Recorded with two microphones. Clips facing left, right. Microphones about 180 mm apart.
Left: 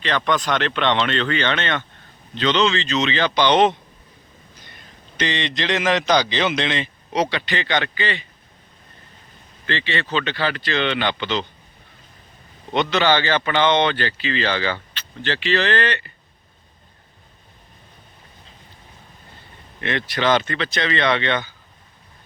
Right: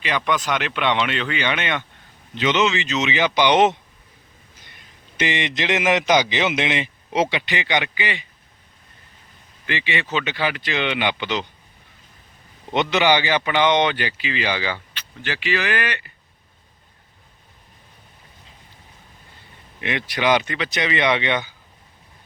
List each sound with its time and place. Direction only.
0.0 s speech: 10° right (ahead or behind)
5.2 s speech: 20° right (ahead or behind)
9.6 s speech: 15° right (ahead or behind)
12.7 s speech: 15° right (ahead or behind)
19.8 s speech: 15° right (ahead or behind)